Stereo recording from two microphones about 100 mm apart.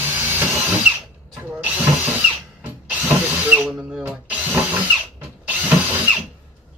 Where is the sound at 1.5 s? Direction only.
15° right (ahead or behind).